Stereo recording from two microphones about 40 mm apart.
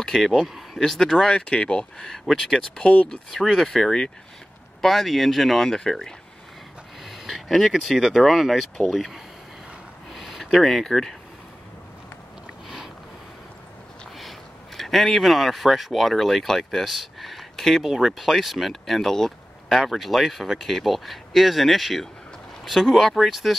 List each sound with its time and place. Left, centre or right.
0.0 s speech: centre
0.3 s speech: centre
1.3 s speech: left
2.0 s speech: centre
3.7 s speech: centre
4.8 s speech: centre
7.1 s speech: centre
12.6 s sniff: centre
14.8 s speech: centre
19.7 s speech: centre